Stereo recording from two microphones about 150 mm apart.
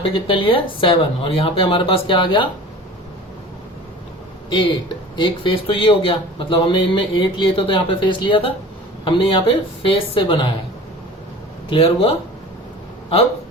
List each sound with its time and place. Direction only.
0.0 s a man's voice: 35° left (ahead or behind)
4.4 s a man's voice: 35° left (ahead or behind)
11.7 s a man's voice: 40° left (ahead or behind)